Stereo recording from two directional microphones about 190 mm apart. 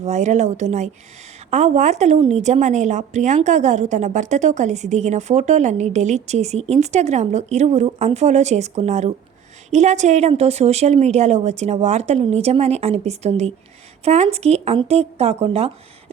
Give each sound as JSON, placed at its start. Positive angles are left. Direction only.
{"t": 0.0, "sound": "a woman's voice", "side_deg": -40}